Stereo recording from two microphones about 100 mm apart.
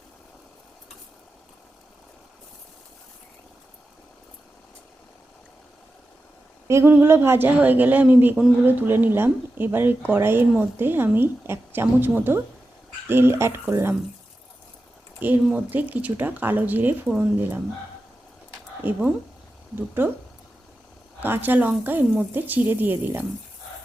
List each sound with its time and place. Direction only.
6.7 s speech: 25° right (ahead or behind)
15.2 s speech: 20° right (ahead or behind)
18.8 s speech: 15° right (ahead or behind)
21.2 s speech: 20° right (ahead or behind)